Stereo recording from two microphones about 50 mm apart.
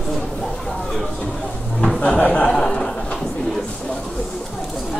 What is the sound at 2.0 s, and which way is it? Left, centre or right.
Speech, left.